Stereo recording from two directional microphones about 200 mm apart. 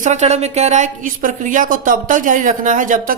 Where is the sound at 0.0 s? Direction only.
35° right (ahead or behind).